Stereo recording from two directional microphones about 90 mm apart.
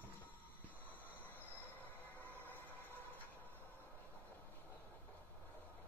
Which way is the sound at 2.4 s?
20° left (ahead or behind).